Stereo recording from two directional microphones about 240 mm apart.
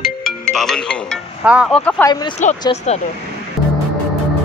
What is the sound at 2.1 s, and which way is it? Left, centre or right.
Speech, centre.